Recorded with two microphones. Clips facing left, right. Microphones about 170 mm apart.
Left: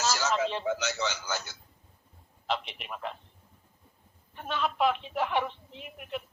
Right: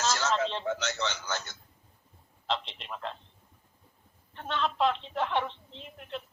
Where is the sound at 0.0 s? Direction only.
5° left (ahead or behind).